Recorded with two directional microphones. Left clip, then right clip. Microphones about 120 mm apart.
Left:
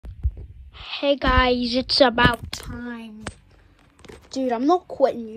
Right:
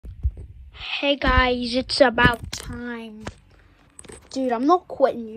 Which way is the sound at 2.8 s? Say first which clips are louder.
Right 2 dB; 25° left (ahead or behind).